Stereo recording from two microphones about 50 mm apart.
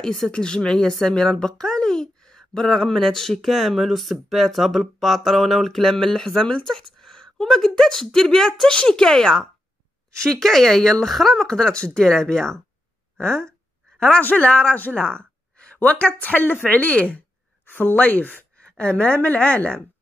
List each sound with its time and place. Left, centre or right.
0.0 s a woman's voice: centre
13.2 s a sound: centre
14.4 s a woman's voice: left
15.0 s a sound: centre
15.8 s speech: left
17.6 s speech: left
18.8 s a woman's voice: left